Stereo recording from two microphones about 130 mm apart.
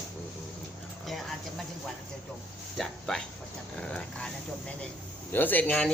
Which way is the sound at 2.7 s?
5° left (ahead or behind).